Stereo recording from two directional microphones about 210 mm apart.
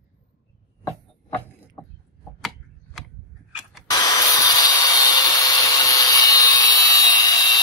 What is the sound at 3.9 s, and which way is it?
Tools, 15° left (ahead or behind).